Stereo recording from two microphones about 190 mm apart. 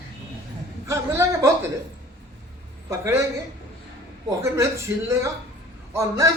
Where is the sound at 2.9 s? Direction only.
15° right (ahead or behind).